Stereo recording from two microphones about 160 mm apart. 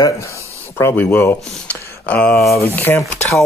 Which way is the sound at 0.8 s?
15° left (ahead or behind).